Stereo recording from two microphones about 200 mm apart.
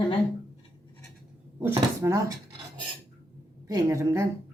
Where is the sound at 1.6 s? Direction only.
15° right (ahead or behind).